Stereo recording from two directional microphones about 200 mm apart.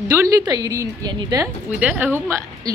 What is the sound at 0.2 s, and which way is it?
A woman's voice, 20° right (ahead or behind).